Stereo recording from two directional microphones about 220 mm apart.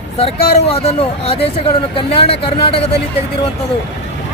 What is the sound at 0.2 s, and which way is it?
Speech, 25° left (ahead or behind).